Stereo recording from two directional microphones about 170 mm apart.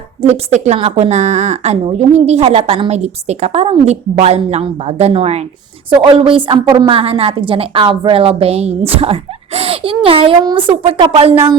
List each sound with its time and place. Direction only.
0.2 s a woman's voice: 40° right (ahead or behind)